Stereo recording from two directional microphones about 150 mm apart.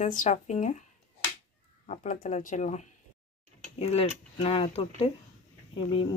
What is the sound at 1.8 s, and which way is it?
Speech, 60° left (ahead or behind).